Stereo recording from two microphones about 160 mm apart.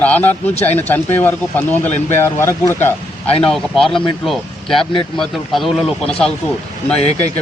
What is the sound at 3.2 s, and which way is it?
Speech, 40° left (ahead or behind).